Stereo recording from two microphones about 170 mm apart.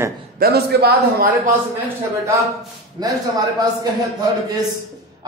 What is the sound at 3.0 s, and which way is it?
Speech, 25° right (ahead or behind).